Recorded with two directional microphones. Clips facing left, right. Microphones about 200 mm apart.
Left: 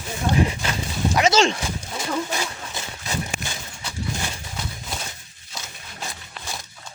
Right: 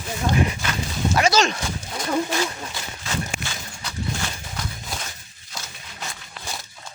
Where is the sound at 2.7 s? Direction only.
15° left (ahead or behind).